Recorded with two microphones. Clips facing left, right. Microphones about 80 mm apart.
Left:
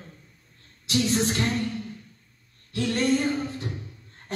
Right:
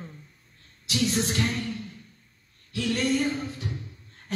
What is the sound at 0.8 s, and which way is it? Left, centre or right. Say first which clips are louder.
Speech: left 3 dB; left.